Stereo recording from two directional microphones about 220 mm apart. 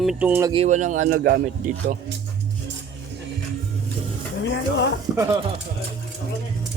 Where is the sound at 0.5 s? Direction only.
30° right (ahead or behind).